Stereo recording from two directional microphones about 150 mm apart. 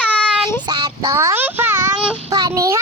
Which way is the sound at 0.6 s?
30° right (ahead or behind).